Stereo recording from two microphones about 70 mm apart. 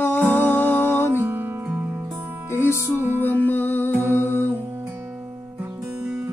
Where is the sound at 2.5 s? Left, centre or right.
Right.